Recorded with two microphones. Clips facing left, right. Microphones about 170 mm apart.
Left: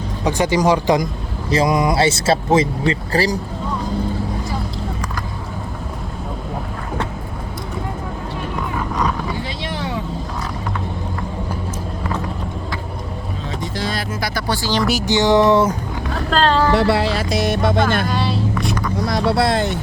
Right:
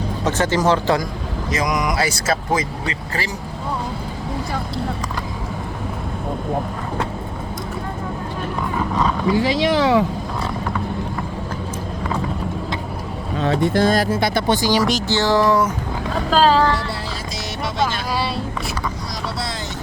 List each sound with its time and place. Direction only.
0.3 s music: 15° left (ahead or behind)
1.5 s speech: 30° left (ahead or behind)
9.3 s speech: 90° right
13.4 s speech: 65° right (ahead or behind); by 14.1 s 45° right (ahead or behind)
14.1 s speech: 25° right (ahead or behind)
14.8 s music: 15° left (ahead or behind)
16.3 s speech: 5° right (ahead or behind)
16.7 s speech: 75° left (ahead or behind); by 18.0 s 55° left (ahead or behind)
18.0 s a sound: centre (ahead or behind)
19.0 s speech: 60° left (ahead or behind)